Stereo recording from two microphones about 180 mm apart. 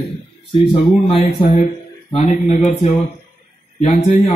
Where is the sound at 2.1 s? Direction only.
40° left (ahead or behind).